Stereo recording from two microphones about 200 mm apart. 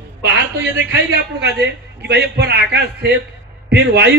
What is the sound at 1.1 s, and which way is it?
A man's voice, 55° right (ahead or behind).